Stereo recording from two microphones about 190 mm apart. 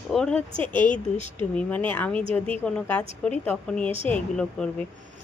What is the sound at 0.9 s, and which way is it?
Speech, 40° left (ahead or behind).